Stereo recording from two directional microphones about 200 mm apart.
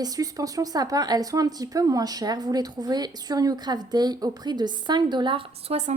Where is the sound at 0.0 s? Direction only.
20° right (ahead or behind).